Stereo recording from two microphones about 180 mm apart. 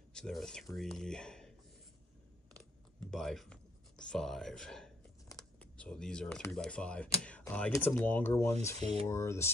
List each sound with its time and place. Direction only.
0.1 s speech: centre (ahead or behind)
3.1 s speech: centre (ahead or behind)
8.7 s speech: 35° right (ahead or behind)
9.0 s speech: 15° left (ahead or behind)